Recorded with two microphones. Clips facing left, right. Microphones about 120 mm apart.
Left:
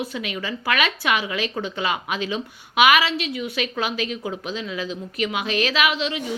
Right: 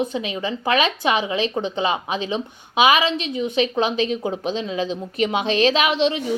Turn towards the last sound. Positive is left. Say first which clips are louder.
# right 4 dB
turn(degrees=-30)  # may be behind; listen again after turning